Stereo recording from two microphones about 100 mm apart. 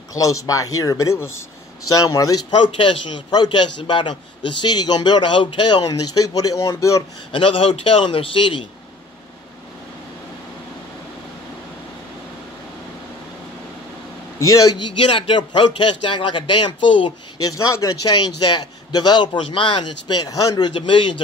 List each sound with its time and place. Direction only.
0.1 s speech: 35° left (ahead or behind)
2.5 s a man's voice: 55° left (ahead or behind)
3.3 s a man's voice: 45° left (ahead or behind)
7.3 s a man's voice: 65° left (ahead or behind)
14.4 s speech: 35° left (ahead or behind)
14.8 s a man's voice: 55° left (ahead or behind)
17.6 s speech: 35° left (ahead or behind)
18.1 s a man's voice: 45° left (ahead or behind)
19.4 s a man's voice: 55° left (ahead or behind)